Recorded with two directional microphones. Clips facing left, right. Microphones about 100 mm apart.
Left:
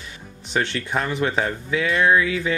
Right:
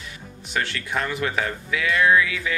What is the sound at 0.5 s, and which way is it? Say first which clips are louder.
Speech: left 3 dB; 25° left (ahead or behind).